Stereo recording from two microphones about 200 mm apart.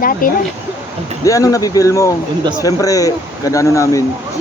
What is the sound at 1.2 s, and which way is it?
Speech, 15° left (ahead or behind).